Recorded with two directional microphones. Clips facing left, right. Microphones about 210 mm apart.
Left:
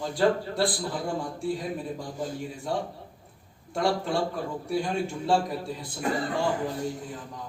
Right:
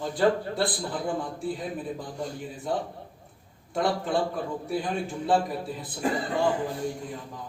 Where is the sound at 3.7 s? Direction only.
Centre (ahead or behind).